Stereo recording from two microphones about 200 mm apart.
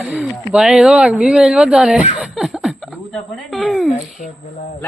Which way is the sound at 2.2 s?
5° right (ahead or behind).